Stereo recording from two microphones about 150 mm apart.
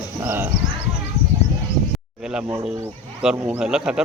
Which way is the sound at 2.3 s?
5° right (ahead or behind).